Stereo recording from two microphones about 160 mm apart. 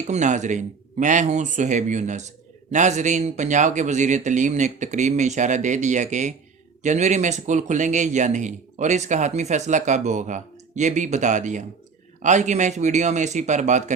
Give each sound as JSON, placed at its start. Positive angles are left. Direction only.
{"t": 0.1, "sound": "speech", "side_deg": -50}